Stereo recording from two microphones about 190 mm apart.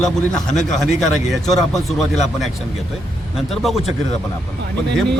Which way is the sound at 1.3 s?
Centre (ahead or behind).